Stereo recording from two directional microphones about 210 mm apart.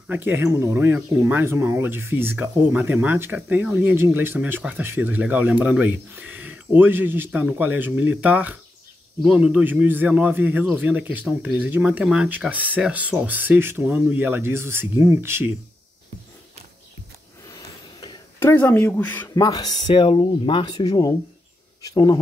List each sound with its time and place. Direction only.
0.1 s speech: 10° right (ahead or behind)
18.4 s speech: 10° left (ahead or behind)
19.4 s speech: 20° left (ahead or behind)